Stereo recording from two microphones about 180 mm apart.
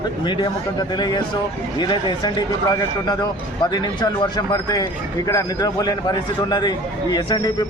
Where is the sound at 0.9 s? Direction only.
25° left (ahead or behind).